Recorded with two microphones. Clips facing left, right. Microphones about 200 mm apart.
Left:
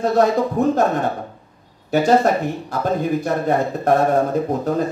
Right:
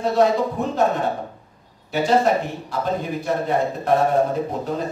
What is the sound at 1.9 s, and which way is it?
A man's voice, 45° left (ahead or behind).